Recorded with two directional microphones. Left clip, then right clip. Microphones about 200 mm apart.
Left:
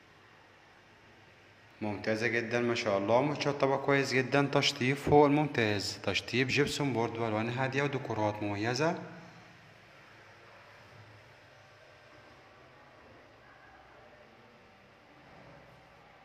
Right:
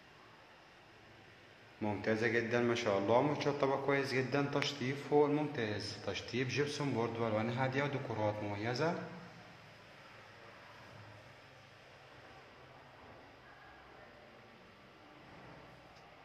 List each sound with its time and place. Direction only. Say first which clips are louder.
1.8 s a man's voice: left 2 dB; 10° left (ahead or behind)